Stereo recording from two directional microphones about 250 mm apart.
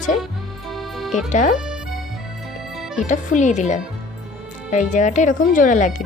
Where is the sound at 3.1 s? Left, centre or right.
Left.